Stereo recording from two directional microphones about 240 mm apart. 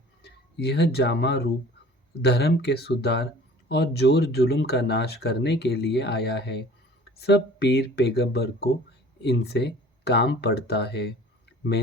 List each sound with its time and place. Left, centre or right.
0.2 s speech: left